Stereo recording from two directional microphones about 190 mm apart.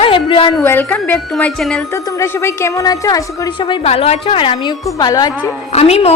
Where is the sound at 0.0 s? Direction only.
30° left (ahead or behind).